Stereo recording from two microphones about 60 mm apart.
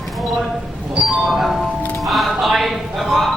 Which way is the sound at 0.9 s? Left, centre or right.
Centre.